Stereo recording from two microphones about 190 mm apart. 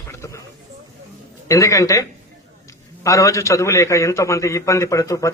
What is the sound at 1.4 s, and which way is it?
A man's voice, 15° left (ahead or behind).